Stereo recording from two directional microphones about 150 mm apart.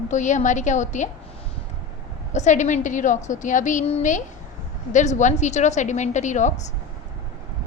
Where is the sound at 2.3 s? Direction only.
55° left (ahead or behind).